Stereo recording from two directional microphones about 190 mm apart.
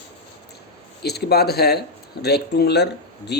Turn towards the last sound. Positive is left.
turn(degrees=60)  # may be behind; listen again after turning